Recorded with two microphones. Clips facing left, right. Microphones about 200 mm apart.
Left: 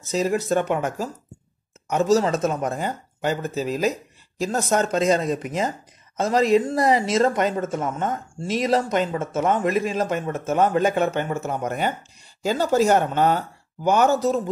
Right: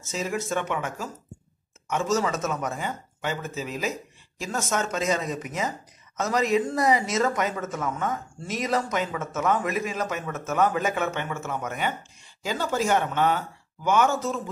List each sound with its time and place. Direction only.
0.1 s speech: 35° left (ahead or behind)